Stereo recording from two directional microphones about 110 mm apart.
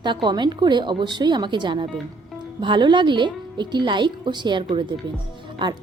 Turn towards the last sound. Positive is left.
turn(degrees=-45)  # may be behind; listen again after turning